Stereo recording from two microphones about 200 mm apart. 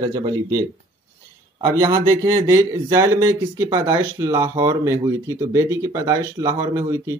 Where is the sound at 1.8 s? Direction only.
15° right (ahead or behind).